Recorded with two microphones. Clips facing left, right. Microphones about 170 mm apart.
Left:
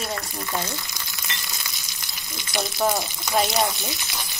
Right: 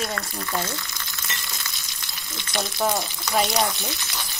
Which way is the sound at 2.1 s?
20° left (ahead or behind).